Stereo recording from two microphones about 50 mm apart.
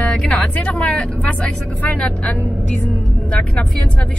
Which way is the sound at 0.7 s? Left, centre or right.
Left.